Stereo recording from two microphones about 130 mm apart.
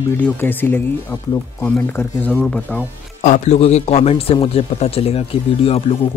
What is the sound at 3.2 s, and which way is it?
A man's voice, 65° left (ahead or behind).